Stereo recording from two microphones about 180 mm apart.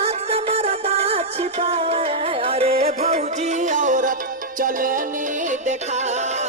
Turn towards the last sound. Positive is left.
turn(degrees=-40)  # may be behind; listen again after turning